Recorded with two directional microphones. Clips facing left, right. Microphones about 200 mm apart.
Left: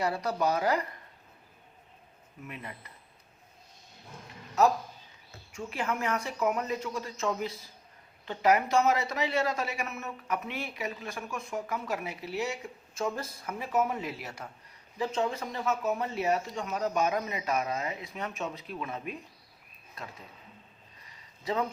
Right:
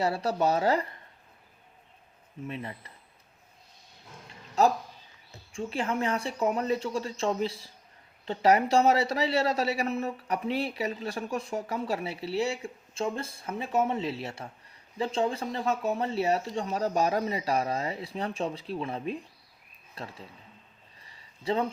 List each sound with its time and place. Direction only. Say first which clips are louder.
0.0 s speech: right 2 dB; 30° right (ahead or behind)
2.5 s speech: right 5 dB; 30° right (ahead or behind)
4.6 s speech: right 1 dB; 30° right (ahead or behind)
21.0 s a sound: right 4 dB; 30° right (ahead or behind)